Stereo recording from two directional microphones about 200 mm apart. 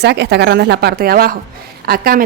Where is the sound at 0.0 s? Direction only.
55° right (ahead or behind).